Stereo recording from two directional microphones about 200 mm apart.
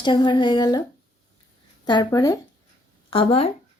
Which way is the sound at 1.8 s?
20° left (ahead or behind).